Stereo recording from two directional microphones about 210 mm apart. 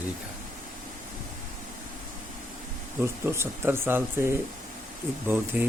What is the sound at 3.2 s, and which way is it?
Speech, 10° right (ahead or behind).